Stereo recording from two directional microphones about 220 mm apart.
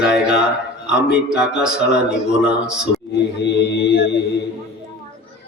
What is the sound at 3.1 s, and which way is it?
Music, 50° left (ahead or behind).